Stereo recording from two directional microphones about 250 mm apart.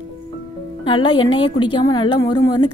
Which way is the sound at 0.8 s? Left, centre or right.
Centre.